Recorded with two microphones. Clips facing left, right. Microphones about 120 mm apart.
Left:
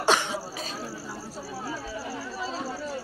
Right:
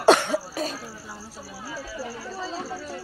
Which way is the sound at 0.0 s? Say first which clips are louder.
Right 7 dB; 45° right (ahead or behind).